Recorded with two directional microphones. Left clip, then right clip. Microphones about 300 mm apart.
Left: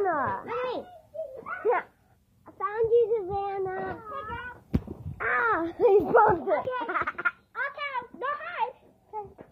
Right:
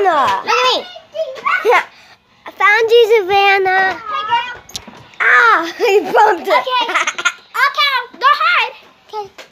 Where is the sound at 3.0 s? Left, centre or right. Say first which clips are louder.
Right 16 dB; right.